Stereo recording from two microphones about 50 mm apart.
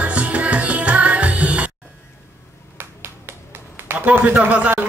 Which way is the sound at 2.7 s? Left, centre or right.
Right.